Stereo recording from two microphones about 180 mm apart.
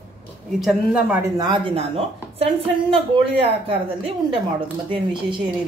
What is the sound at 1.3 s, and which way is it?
A woman's voice, 30° right (ahead or behind).